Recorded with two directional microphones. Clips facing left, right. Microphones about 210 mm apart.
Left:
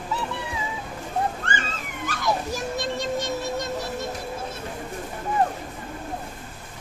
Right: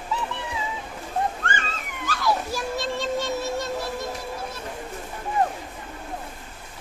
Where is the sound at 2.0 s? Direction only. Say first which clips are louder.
Right 1 dB; 20° left (ahead or behind).